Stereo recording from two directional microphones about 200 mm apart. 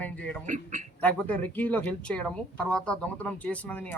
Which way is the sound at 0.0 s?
5° left (ahead or behind).